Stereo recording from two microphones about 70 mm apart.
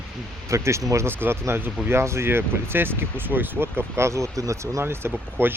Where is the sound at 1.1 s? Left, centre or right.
Right.